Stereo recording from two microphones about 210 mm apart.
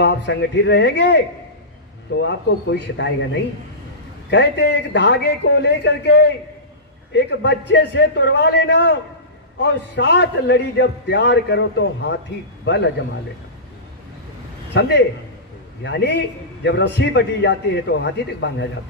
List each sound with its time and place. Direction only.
0.0 s a man's voice: 55° left (ahead or behind)
2.2 s a man's voice: 60° left (ahead or behind)
4.3 s a man's voice: 55° left (ahead or behind)
14.7 s a man's voice: 55° left (ahead or behind)